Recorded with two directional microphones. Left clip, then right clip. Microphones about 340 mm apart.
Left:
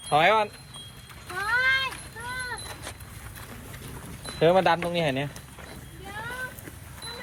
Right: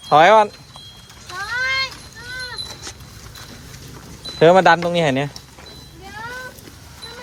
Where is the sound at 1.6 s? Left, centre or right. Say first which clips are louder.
Right 4 dB; centre.